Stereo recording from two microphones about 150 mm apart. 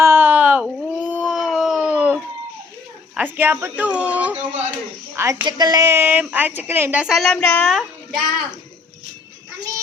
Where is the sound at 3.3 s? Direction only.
15° right (ahead or behind).